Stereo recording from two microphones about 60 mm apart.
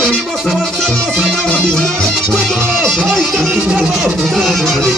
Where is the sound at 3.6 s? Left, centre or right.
Right.